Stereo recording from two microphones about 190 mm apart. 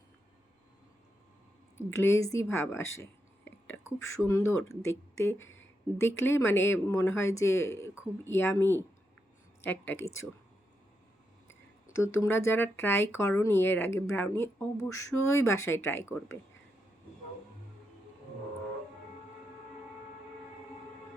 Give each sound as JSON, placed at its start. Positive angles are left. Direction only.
{"t": 1.9, "sound": "speech", "side_deg": 15}
{"t": 5.4, "sound": "a sound", "side_deg": 90}
{"t": 6.0, "sound": "speech", "side_deg": 15}
{"t": 11.9, "sound": "speech", "side_deg": 15}